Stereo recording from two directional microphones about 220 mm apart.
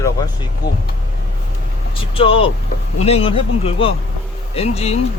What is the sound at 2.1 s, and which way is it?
Speech, 25° left (ahead or behind).